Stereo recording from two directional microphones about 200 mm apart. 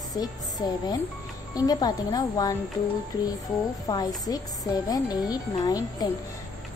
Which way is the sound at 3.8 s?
20° left (ahead or behind).